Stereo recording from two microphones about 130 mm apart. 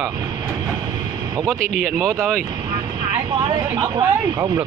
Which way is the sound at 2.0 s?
25° right (ahead or behind).